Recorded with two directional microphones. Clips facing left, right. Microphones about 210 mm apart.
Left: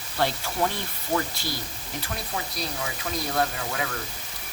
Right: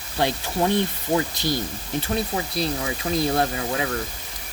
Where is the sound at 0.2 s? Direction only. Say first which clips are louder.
Right 3 dB; 15° right (ahead or behind).